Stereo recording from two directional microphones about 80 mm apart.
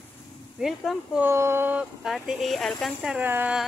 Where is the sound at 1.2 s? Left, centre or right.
Right.